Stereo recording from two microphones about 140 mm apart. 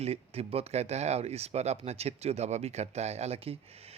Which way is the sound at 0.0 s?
45° right (ahead or behind).